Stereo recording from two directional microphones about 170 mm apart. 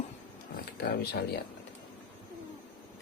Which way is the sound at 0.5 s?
65° left (ahead or behind).